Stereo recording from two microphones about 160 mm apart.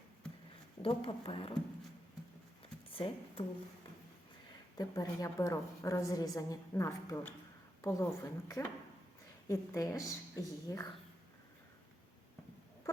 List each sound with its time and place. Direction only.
0.8 s speech: 35° left (ahead or behind)
2.9 s a woman's voice: 35° left (ahead or behind)
4.8 s a woman's voice: 20° left (ahead or behind)